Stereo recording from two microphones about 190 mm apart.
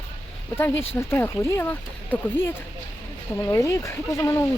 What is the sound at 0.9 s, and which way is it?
Speech, 10° left (ahead or behind).